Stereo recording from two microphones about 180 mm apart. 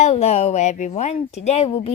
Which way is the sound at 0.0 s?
35° left (ahead or behind).